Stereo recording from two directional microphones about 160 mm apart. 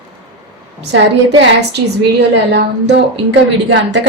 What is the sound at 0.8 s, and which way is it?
A woman's voice, 90° right.